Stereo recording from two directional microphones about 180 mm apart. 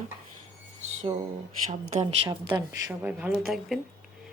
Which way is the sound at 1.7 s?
40° right (ahead or behind).